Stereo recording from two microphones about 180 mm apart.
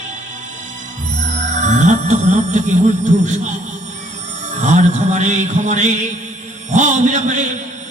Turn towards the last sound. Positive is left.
turn(degrees=-45)  # may be behind; listen again after turning